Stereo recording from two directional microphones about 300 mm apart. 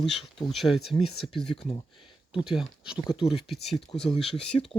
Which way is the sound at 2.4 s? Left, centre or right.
Centre.